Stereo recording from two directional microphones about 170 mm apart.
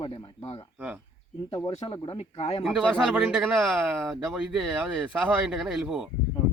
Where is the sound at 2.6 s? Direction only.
Centre (ahead or behind).